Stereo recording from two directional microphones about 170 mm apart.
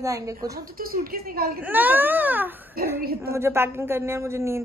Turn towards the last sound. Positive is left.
turn(degrees=-15)  # may be behind; listen again after turning